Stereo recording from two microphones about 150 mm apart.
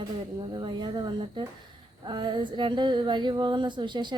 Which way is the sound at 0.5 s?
30° right (ahead or behind).